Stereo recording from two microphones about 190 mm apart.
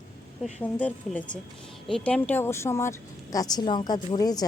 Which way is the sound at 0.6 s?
10° left (ahead or behind).